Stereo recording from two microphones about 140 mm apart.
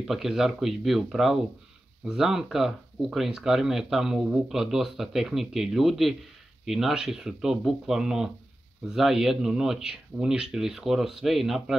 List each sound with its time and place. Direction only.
0.0 s speech: 5° right (ahead or behind)